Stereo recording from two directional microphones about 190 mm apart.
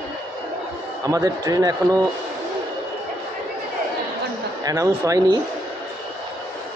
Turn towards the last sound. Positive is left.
turn(degrees=-15)  # may be behind; listen again after turning